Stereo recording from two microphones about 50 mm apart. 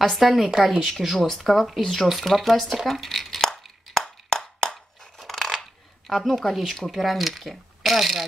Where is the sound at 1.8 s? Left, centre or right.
Centre.